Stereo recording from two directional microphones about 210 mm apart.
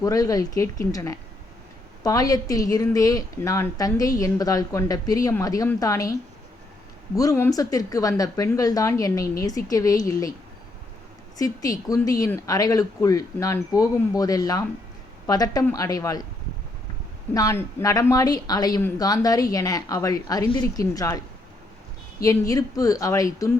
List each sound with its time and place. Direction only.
0.0 s a woman's voice: 15° left (ahead or behind)
7.2 s a woman's voice: 15° left (ahead or behind)
11.3 s a woman's voice: 15° left (ahead or behind)
17.3 s a woman's voice: 15° left (ahead or behind)